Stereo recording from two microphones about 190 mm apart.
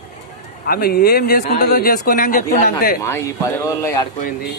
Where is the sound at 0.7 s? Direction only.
55° left (ahead or behind).